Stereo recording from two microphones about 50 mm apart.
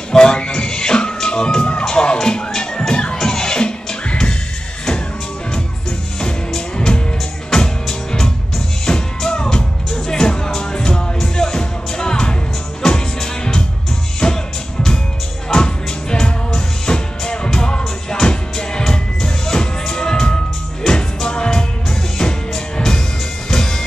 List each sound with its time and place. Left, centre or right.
0.1 s music: centre
5.5 s music: centre